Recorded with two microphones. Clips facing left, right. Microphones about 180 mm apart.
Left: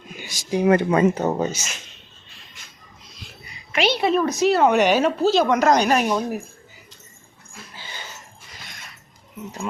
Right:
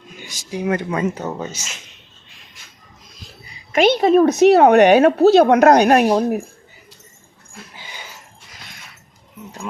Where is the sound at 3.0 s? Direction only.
40° right (ahead or behind).